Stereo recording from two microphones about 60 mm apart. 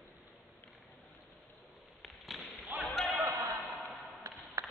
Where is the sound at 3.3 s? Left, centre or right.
Right.